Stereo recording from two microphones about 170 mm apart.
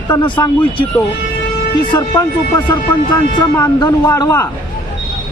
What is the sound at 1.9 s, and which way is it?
Speech, 20° left (ahead or behind).